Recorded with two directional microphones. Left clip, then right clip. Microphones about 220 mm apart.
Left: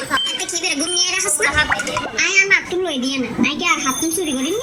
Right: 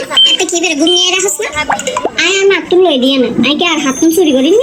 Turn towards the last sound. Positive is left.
turn(degrees=-45)  # may be behind; listen again after turning